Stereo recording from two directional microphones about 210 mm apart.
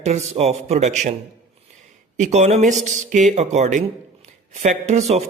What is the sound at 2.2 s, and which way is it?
Speech, 35° right (ahead or behind).